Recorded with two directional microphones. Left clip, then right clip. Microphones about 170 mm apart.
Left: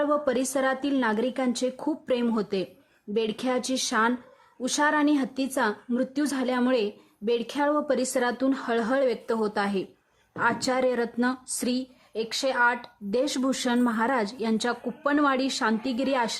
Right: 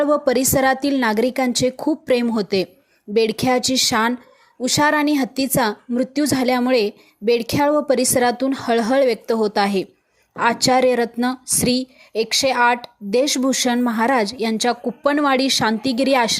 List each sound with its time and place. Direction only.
0.0 s a woman's voice: 25° right (ahead or behind)